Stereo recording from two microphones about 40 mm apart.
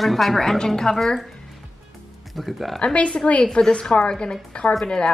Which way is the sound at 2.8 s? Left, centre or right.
Left.